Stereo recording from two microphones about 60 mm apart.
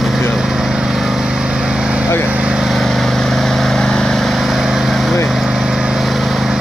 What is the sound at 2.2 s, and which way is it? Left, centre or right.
Lawn mower, right.